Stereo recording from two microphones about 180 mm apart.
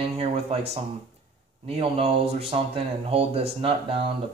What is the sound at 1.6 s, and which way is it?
Speech, 35° right (ahead or behind).